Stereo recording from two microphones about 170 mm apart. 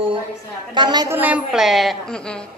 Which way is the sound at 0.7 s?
25° right (ahead or behind).